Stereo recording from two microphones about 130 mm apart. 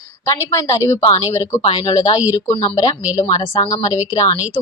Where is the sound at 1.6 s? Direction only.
40° left (ahead or behind).